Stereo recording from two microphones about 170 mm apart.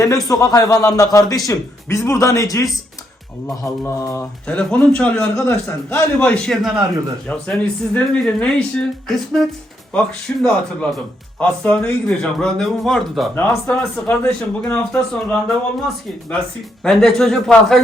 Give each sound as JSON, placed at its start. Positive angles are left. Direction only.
{"t": 0.0, "sound": "a man's voice", "side_deg": 20}
{"t": 16.8, "sound": "speech", "side_deg": 0}